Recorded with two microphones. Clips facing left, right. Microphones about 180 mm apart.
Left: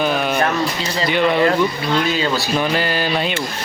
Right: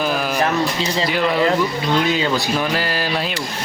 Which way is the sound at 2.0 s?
15° right (ahead or behind).